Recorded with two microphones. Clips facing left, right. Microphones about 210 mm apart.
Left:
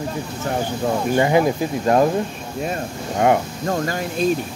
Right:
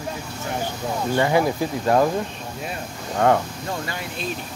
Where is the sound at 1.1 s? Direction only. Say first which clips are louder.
Left 2 dB; 20° left (ahead or behind).